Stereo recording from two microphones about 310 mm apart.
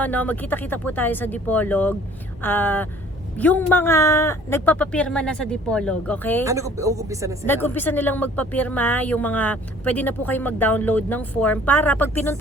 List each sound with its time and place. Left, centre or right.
0.0 s speech: centre
6.4 s speech: centre
7.4 s speech: centre